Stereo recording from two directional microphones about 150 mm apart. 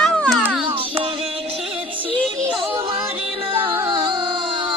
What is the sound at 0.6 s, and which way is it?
Music, 35° right (ahead or behind).